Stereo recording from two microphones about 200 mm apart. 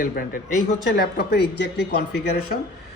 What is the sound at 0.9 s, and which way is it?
Speech, 55° left (ahead or behind).